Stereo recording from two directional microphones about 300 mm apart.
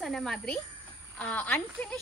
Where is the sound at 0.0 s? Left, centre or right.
Centre.